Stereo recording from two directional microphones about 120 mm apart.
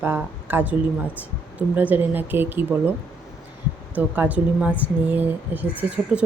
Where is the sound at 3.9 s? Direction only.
15° right (ahead or behind).